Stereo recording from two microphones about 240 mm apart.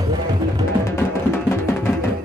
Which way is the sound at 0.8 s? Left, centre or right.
Centre.